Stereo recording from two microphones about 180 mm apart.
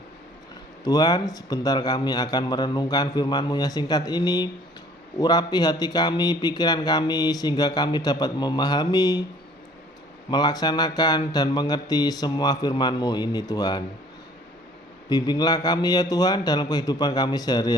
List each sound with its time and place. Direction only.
0.9 s speech: 20° left (ahead or behind)
10.2 s speech: 25° left (ahead or behind)
15.1 s speech: 25° left (ahead or behind)